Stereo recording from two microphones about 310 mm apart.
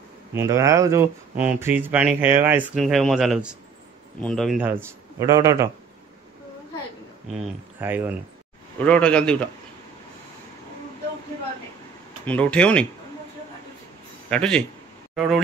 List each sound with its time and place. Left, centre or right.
0.3 s a man's voice: centre
7.8 s a man's voice: centre
8.7 s speech: centre
12.3 s speech: centre
14.3 s speech: centre